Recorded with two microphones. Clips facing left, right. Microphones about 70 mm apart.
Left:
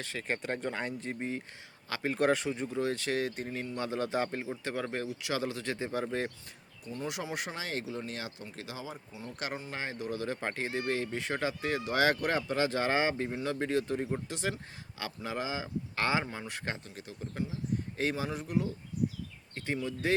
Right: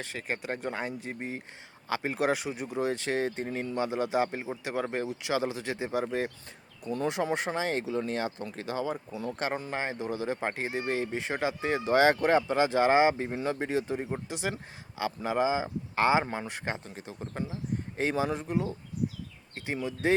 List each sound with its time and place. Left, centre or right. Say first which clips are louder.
0.2 s speech: even; centre; by 3.7 s right
3.8 s speech: right 4 dB; centre
7.1 s speech: right 8 dB; right
9.3 s speech: right 5 dB; right
9.7 s speech: right 4 dB; right
16.2 s speech: right 5 dB; right
16.5 s speech: right 3 dB; right
17.2 s speech: right 1 dB; right
17.9 s speech: right 6 dB; right